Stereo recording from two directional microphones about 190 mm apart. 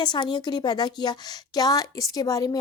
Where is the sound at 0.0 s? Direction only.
25° left (ahead or behind).